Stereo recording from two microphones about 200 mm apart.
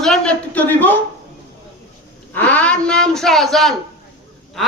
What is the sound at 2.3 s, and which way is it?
A man's voice, 10° left (ahead or behind).